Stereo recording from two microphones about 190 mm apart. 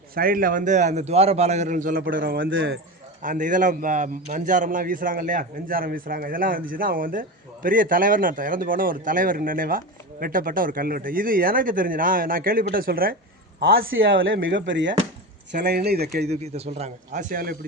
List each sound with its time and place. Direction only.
0.1 s a man's voice: 50° right (ahead or behind)
14.0 s speech: 90° right
14.4 s speech: 75° right (ahead or behind)
15.5 s speech: 55° right (ahead or behind)
16.3 s a man's voice: 35° right (ahead or behind)